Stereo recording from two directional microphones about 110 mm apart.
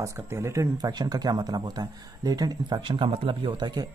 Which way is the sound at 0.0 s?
25° right (ahead or behind).